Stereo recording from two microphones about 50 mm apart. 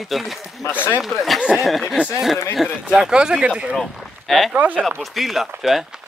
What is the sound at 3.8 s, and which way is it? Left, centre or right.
Speech, centre.